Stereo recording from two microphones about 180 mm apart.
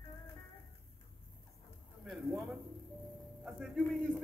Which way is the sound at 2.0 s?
Centre (ahead or behind).